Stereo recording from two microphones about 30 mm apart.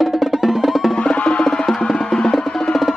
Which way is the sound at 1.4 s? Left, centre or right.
Centre.